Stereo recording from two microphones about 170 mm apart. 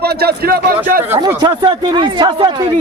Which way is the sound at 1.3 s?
25° right (ahead or behind).